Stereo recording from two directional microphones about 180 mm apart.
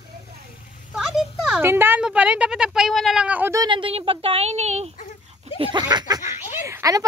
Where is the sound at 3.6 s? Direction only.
25° right (ahead or behind).